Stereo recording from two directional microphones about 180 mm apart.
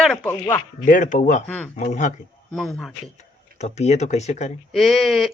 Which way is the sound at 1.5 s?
10° left (ahead or behind).